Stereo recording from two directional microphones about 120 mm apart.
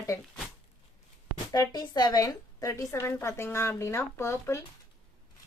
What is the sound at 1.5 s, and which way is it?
A woman's voice, 35° left (ahead or behind).